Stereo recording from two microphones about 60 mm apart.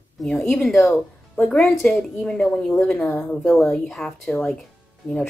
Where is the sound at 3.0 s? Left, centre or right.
Left.